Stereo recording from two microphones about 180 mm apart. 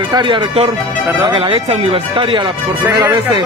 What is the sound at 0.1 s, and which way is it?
Speech, 25° right (ahead or behind).